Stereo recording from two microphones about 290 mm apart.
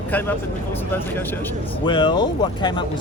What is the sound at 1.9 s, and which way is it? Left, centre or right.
Speech, centre.